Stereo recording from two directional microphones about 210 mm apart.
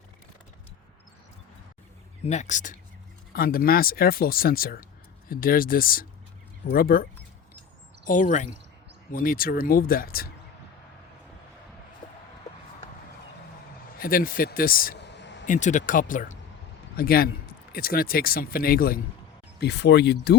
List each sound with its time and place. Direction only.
2.2 s speech: 35° left (ahead or behind)
14.0 s speech: 45° left (ahead or behind)
15.4 s speech: 35° left (ahead or behind); by 20.3 s 55° left (ahead or behind)